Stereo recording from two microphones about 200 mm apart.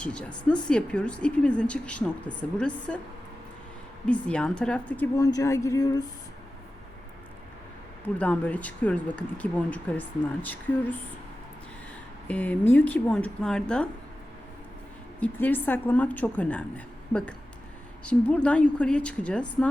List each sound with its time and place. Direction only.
0.0 s a woman's voice: 5° left (ahead or behind)
4.0 s a woman's voice: 5° left (ahead or behind)
5.1 s speech: 15° left (ahead or behind)
8.0 s speech: 5° left (ahead or behind)
12.3 s speech: 5° left (ahead or behind)
15.2 s a woman's voice: 10° left (ahead or behind)